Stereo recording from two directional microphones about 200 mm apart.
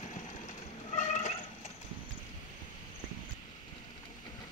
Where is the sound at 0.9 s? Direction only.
35° left (ahead or behind).